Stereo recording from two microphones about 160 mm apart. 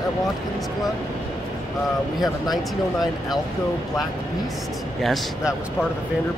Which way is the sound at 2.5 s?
Centre (ahead or behind).